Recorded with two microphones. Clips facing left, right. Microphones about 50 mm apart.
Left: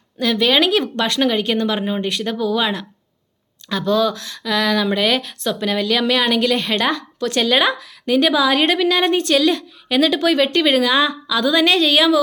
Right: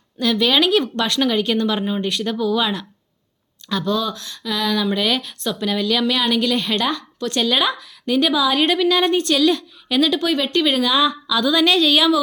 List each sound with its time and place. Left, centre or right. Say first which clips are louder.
0.2 s a woman's voice: left 1 dB; left
4.1 s a sound: left 4 dB; left
4.9 s a woman's voice: left 2 dB; left
7.2 s speech: left 2 dB; left
7.4 s a woman's voice: left 3 dB; left
10.2 s a woman's voice: left 3 dB; left